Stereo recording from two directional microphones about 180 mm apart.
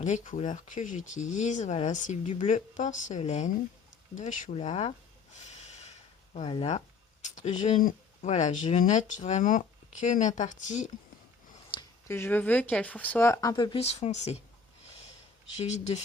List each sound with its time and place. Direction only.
0.0 s speech: 40° left (ahead or behind)
4.1 s a sound: 45° left (ahead or behind)
6.3 s speech: 35° left (ahead or behind)
12.0 s speech: 15° left (ahead or behind); by 14.4 s 35° left (ahead or behind)
15.5 s speech: 40° left (ahead or behind)